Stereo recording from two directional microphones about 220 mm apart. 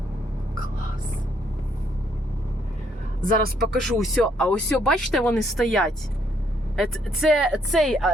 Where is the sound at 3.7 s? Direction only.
Centre (ahead or behind).